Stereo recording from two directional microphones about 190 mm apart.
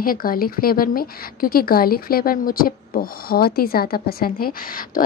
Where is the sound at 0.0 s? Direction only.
50° left (ahead or behind).